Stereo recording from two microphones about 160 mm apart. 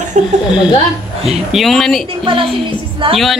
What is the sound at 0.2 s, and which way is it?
Speech, 45° right (ahead or behind).